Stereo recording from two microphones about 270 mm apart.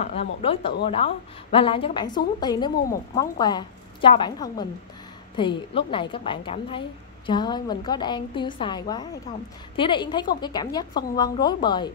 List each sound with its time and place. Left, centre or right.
0.0 s a woman's voice: left